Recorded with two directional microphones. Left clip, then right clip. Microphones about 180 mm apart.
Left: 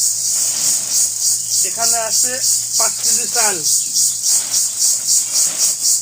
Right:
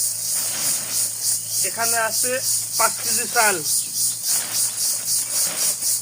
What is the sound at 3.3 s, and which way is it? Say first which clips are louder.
Speech: right 3 dB; 5° right (ahead or behind).